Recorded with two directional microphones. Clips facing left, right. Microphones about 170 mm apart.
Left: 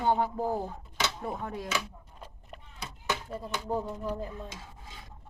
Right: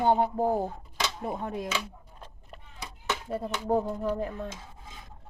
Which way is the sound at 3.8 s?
60° right (ahead or behind).